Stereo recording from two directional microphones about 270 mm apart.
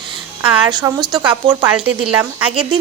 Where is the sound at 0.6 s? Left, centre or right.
Centre.